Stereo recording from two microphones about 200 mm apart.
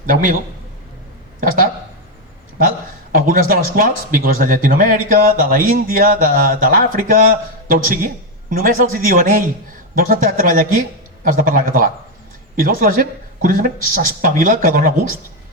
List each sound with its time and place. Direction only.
0.0 s speech: 40° right (ahead or behind)
1.4 s speech: 45° right (ahead or behind)
3.2 s speech: 45° right (ahead or behind)